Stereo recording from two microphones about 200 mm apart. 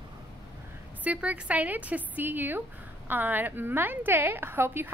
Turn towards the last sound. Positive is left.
turn(degrees=-10)  # may be behind; listen again after turning